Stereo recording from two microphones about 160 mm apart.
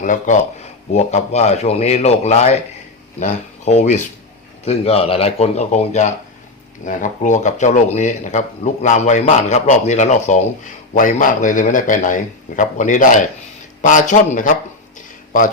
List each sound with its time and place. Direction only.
0.0 s speech: 50° left (ahead or behind)